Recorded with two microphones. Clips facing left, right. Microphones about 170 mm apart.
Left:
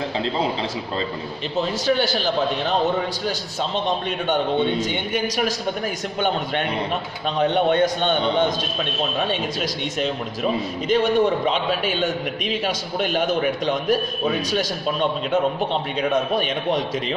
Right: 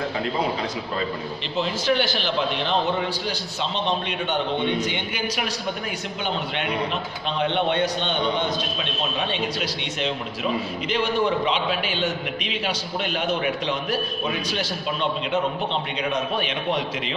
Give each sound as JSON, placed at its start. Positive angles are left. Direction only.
{"t": 1.6, "sound": "a man's voice", "side_deg": 40}
{"t": 5.1, "sound": "a man's voice", "side_deg": 40}